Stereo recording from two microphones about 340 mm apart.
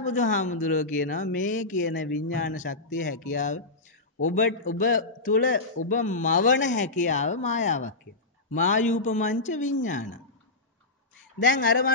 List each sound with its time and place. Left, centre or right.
0.0 s speech: left
11.3 s speech: left